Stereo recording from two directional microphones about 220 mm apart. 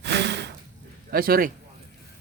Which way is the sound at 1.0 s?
40° right (ahead or behind).